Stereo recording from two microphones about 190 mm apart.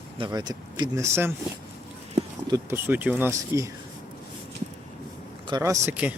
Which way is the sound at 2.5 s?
10° right (ahead or behind).